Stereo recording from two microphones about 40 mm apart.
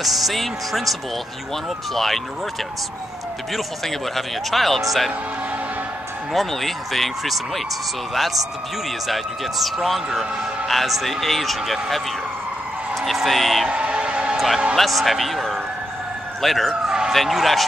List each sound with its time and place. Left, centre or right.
0.0 s speech: centre
2.0 s speech: centre
3.5 s speech: centre
6.3 s speech: centre
13.7 s a sound: right
14.3 s a sound: centre
14.8 s speech: centre
16.8 s police car: centre
17.1 s speech: centre